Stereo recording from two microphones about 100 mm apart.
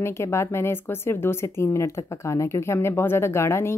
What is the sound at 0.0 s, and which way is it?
Speech, 25° left (ahead or behind).